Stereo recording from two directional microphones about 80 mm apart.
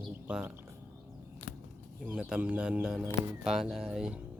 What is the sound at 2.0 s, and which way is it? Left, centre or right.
Speech, centre.